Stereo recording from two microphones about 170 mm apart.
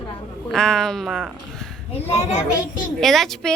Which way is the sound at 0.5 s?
5° left (ahead or behind).